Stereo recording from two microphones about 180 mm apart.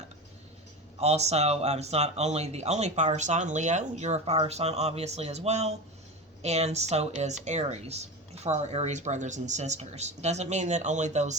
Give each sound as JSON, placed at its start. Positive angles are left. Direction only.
{"t": 0.9, "sound": "speech", "side_deg": -35}